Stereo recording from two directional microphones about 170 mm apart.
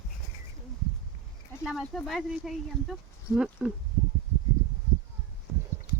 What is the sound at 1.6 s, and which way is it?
Speech, centre (ahead or behind).